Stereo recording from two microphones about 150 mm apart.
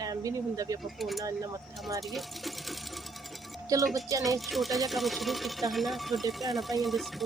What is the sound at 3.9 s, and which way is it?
Speech, 20° right (ahead or behind).